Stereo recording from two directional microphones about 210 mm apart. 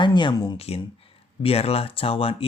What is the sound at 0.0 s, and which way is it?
Speech, 20° left (ahead or behind).